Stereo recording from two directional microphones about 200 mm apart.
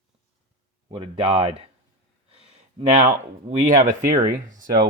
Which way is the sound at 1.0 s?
30° right (ahead or behind).